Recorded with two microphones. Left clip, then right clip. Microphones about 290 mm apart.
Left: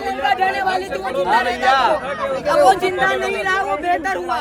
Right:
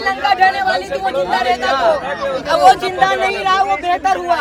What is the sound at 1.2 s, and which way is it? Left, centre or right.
Speech, left.